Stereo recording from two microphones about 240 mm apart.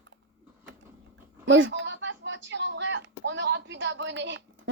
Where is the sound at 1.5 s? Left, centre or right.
Right.